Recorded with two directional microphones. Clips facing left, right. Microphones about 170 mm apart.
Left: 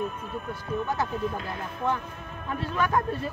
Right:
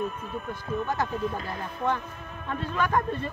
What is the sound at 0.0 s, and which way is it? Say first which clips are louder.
Speech: even; centre (ahead or behind).